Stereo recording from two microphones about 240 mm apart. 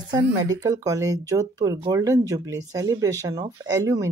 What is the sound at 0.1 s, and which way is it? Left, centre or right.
Speech, centre.